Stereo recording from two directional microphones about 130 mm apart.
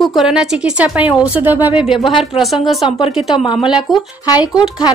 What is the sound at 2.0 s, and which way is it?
Speech, 40° left (ahead or behind).